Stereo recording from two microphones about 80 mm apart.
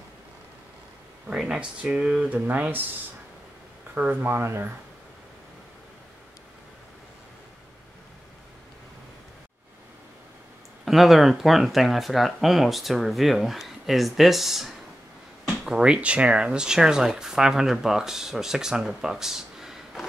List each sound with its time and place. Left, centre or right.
1.3 s speech: centre
3.9 s speech: right
10.9 s speech: centre